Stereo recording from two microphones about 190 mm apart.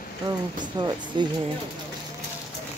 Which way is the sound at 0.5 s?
25° right (ahead or behind).